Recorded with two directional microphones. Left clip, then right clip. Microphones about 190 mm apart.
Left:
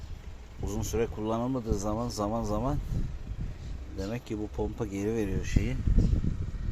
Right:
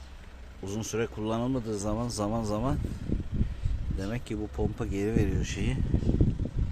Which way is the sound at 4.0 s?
15° right (ahead or behind).